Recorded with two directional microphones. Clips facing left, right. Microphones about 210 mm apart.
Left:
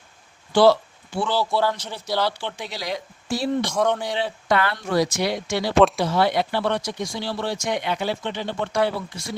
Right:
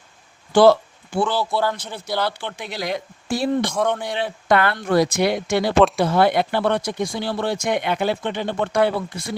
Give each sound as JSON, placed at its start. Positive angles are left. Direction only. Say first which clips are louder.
{"t": 0.5, "sound": "a sound", "louder": "right 3 dB", "side_deg": -50}
{"t": 1.4, "sound": "a man's voice", "louder": "even", "side_deg": 0}
{"t": 2.6, "sound": "speech", "louder": "right 3 dB", "side_deg": -55}
{"t": 3.7, "sound": "a man's voice", "louder": "even", "side_deg": 0}
{"t": 4.2, "sound": "speech", "louder": "right 3 dB", "side_deg": -55}